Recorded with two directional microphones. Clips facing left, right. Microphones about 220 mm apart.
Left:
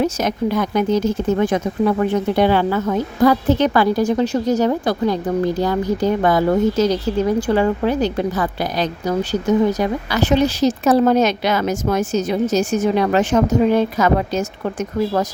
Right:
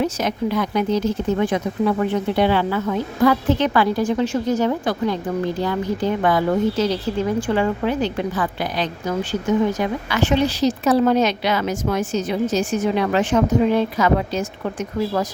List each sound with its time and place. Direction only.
0.0 s speech: 45° left (ahead or behind)